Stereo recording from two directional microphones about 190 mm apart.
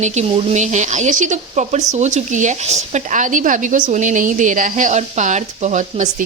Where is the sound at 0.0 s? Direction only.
40° right (ahead or behind).